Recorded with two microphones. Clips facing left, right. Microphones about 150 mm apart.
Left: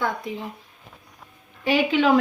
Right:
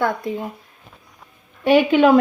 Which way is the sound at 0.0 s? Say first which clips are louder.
Right 5 dB; 50° right (ahead or behind).